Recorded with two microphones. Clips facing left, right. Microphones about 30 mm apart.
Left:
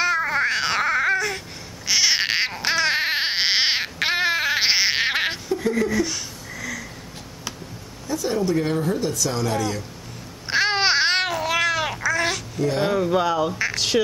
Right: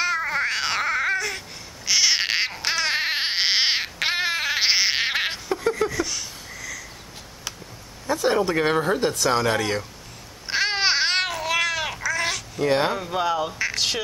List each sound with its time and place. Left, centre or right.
0.0 s baby cry: centre
1.9 s crying: centre
5.9 s a sound: centre
8.1 s speech: right
10.5 s babbling: centre
12.6 s speech: right
12.9 s speech: centre